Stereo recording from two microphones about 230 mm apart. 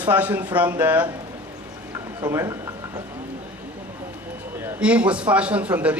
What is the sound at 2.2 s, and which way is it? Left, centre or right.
Speech, centre.